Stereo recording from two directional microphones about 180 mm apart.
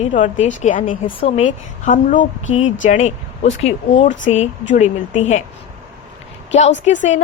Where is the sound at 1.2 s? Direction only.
35° left (ahead or behind).